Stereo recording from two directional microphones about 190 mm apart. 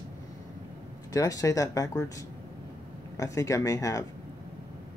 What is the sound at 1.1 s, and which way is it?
Speech, 20° left (ahead or behind).